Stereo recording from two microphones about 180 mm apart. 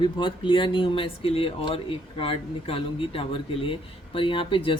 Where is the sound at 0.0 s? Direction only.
25° left (ahead or behind).